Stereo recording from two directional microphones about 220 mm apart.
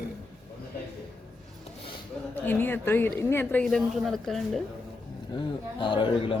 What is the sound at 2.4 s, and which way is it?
A woman's voice, 10° left (ahead or behind).